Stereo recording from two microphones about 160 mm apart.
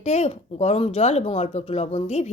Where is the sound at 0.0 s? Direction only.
45° left (ahead or behind).